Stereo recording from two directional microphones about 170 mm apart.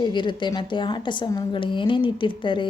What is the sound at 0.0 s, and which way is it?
A woman's voice, 25° left (ahead or behind).